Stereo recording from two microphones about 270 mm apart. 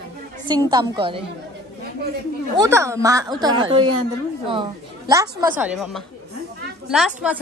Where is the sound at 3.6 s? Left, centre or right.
Right.